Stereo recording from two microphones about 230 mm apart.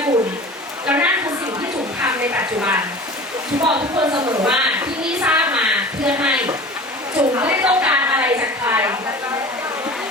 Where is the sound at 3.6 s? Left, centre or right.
Centre.